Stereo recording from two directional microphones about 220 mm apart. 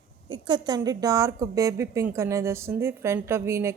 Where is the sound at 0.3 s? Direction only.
20° right (ahead or behind).